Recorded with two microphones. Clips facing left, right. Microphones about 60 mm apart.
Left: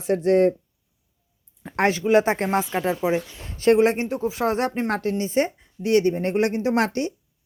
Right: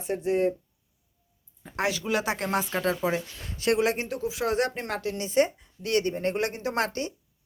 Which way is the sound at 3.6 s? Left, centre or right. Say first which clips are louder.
Left 7 dB; left.